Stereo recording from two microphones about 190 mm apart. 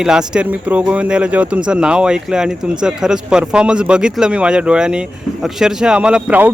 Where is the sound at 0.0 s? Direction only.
5° right (ahead or behind).